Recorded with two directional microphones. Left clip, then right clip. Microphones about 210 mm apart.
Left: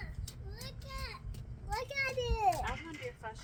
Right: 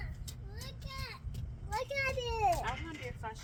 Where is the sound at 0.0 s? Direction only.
45° left (ahead or behind).